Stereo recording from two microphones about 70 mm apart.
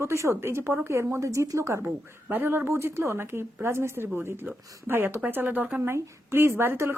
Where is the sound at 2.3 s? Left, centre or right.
Right.